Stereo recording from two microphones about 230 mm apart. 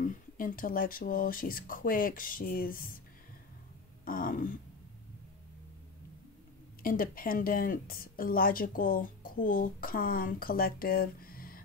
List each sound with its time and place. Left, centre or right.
0.0 s a woman's voice: left
4.0 s a sound: left
6.8 s a woman's voice: left